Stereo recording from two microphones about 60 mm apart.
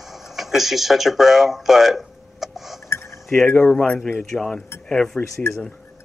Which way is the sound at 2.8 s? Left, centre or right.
Left.